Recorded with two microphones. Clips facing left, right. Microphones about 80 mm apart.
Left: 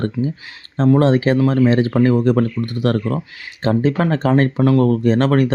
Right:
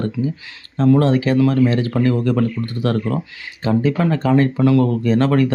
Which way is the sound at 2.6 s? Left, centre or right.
Centre.